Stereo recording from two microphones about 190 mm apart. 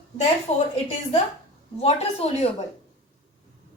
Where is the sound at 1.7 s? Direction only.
35° left (ahead or behind).